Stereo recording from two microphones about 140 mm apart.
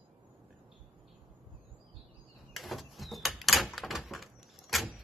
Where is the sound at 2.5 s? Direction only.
Centre (ahead or behind).